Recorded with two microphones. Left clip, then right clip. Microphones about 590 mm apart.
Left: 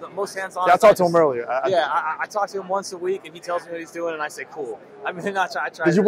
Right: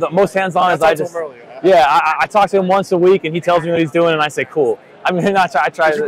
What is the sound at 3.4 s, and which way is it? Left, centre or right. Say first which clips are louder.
Speech: right 13 dB; right.